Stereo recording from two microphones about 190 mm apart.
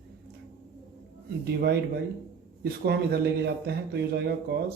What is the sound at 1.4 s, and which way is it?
A man's voice, 60° right (ahead or behind).